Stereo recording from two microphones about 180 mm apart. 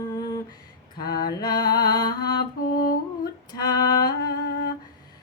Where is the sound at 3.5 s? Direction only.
20° left (ahead or behind).